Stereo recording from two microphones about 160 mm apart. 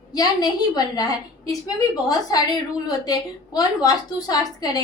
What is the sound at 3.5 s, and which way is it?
A woman's voice, 25° left (ahead or behind).